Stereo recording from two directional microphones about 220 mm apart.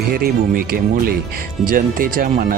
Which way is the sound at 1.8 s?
40° right (ahead or behind).